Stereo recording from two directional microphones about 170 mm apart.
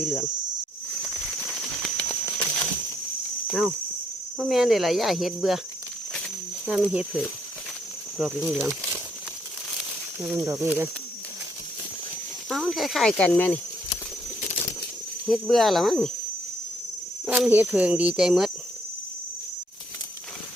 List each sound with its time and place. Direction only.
0.0 s speech: 10° left (ahead or behind)
1.5 s a sound: centre (ahead or behind)
3.4 s speech: centre (ahead or behind)
4.4 s cricket: centre (ahead or behind)
6.7 s speech: 5° right (ahead or behind)
8.2 s cricket: 5° right (ahead or behind)
10.2 s speech: 20° right (ahead or behind)
12.5 s cricket: centre (ahead or behind)
15.3 s cricket: centre (ahead or behind)
17.2 s speech: 10° right (ahead or behind)